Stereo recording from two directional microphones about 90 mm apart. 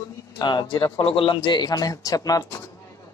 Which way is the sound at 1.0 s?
90° left.